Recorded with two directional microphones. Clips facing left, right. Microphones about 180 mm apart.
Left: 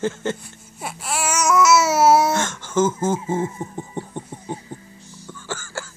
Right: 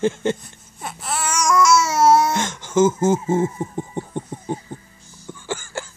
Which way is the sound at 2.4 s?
15° right (ahead or behind).